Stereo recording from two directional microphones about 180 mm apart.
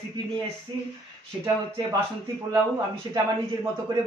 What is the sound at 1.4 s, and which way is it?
Speech, 25° right (ahead or behind).